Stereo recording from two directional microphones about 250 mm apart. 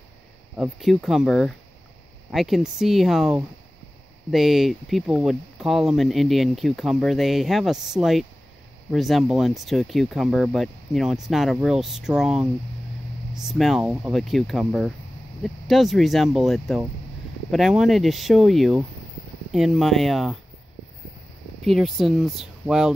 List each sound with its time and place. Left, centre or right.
0.6 s speech: centre
21.6 s speech: centre